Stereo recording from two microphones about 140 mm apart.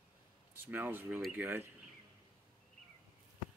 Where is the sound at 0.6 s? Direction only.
15° right (ahead or behind).